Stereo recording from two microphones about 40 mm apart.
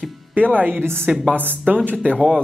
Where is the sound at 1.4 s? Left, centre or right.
Right.